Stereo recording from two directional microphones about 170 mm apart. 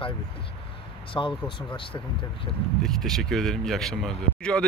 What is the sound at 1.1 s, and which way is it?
Speech, 25° left (ahead or behind).